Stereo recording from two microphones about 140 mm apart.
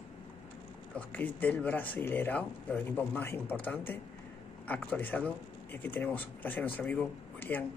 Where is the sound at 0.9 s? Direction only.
10° left (ahead or behind).